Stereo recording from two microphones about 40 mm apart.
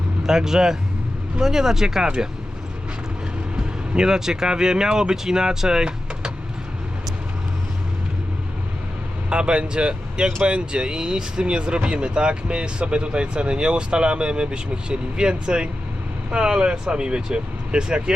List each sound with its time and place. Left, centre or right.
0.2 s speech: centre
3.5 s speech: centre
9.3 s speech: right